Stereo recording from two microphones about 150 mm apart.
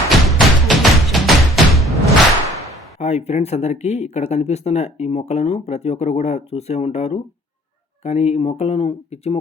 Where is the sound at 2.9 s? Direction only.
50° left (ahead or behind).